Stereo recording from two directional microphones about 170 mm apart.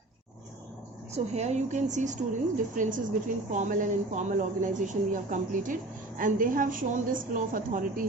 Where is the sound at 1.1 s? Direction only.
40° right (ahead or behind).